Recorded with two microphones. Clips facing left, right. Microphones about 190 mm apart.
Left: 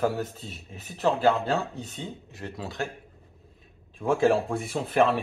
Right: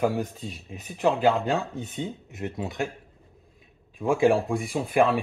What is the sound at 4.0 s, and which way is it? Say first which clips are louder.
Speech: right 1 dB; 10° right (ahead or behind).